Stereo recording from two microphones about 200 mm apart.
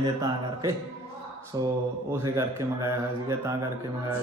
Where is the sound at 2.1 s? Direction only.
15° right (ahead or behind).